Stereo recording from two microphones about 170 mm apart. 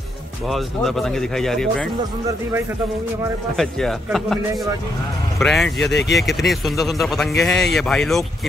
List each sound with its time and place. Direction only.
0.5 s speech: centre (ahead or behind)
3.5 s speech: centre (ahead or behind)
5.4 s speech: centre (ahead or behind)
5.8 s speech: 90° left
6.1 s speech: centre (ahead or behind)